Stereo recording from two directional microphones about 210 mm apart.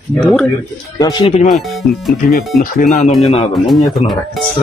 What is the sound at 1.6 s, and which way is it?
Speech, centre (ahead or behind).